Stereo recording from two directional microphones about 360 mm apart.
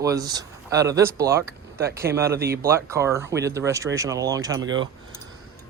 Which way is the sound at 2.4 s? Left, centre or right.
Right.